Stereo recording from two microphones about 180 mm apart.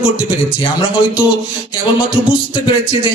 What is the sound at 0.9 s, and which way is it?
Speech, 5° right (ahead or behind).